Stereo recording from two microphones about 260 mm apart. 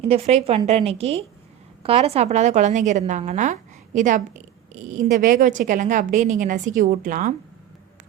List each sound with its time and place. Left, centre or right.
0.0 s a woman's voice: right